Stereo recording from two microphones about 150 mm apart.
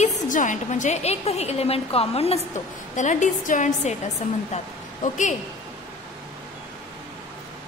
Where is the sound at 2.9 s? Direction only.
55° left (ahead or behind).